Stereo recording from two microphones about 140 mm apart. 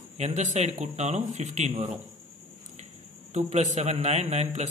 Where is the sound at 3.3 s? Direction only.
55° right (ahead or behind).